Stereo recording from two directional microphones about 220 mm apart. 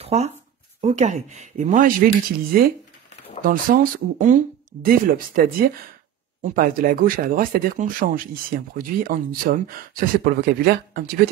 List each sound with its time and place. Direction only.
0.0 s speech: 30° right (ahead or behind)